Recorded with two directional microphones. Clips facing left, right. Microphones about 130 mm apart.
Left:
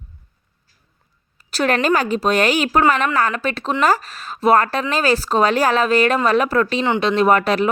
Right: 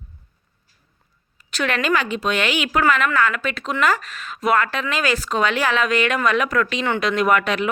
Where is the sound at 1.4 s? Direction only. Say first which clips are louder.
Left 5 dB; 35° left (ahead or behind).